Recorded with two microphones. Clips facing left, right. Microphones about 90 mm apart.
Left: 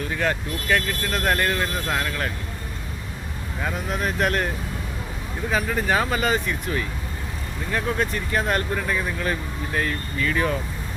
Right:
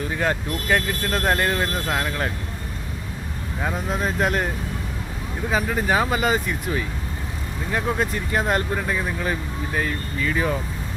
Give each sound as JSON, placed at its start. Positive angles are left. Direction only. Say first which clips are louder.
{"t": 0.1, "sound": "speech", "louder": "right 1 dB", "side_deg": -20}
{"t": 3.8, "sound": "speech", "louder": "even", "side_deg": -25}
{"t": 5.5, "sound": "speech", "louder": "right 1 dB", "side_deg": -15}